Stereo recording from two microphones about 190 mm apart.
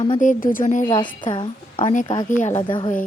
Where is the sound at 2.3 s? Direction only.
40° left (ahead or behind).